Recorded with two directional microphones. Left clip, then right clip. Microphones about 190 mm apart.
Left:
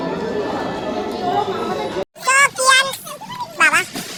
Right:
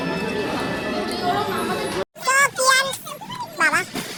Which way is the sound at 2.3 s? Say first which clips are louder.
Left 4 dB; centre (ahead or behind).